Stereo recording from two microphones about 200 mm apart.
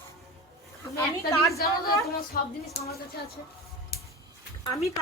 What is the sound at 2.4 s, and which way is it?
Speech, 45° left (ahead or behind).